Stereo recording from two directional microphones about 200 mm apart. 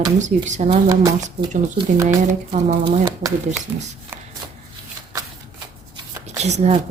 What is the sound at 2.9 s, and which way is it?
Speech, 20° right (ahead or behind).